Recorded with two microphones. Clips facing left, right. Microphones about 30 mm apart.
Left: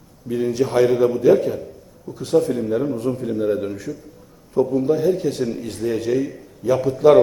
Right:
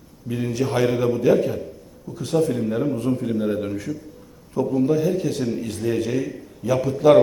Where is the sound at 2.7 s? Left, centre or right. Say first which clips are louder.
Left 1 dB; right.